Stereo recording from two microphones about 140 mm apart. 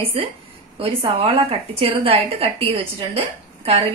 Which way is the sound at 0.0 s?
40° right (ahead or behind).